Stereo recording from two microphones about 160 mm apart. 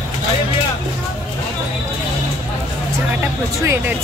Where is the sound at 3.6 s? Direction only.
15° right (ahead or behind).